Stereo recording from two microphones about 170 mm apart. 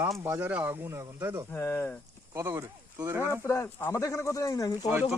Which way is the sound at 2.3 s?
15° right (ahead or behind).